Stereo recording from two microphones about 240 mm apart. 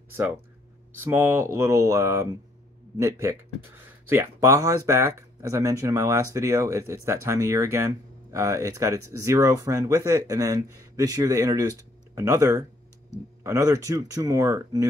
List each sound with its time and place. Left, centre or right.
1.0 s speech: centre